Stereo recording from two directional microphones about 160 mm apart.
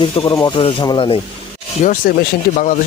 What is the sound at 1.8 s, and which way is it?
Speech, 45° left (ahead or behind).